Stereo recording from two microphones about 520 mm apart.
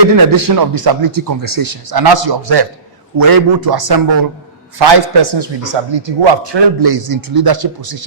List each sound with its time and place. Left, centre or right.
0.0 s a man's voice: right